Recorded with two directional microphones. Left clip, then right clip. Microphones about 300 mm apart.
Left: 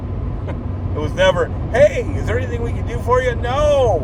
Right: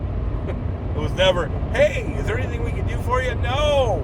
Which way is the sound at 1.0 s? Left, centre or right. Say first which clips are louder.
Left 4 dB; centre.